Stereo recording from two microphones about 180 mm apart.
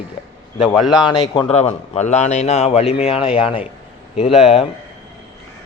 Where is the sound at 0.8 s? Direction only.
5° right (ahead or behind).